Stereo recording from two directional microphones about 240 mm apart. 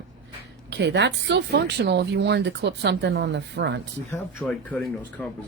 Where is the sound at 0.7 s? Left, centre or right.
Right.